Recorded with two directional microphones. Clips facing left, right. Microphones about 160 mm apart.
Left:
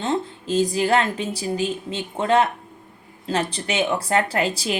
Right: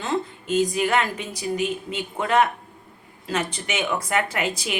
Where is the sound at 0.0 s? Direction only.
30° left (ahead or behind).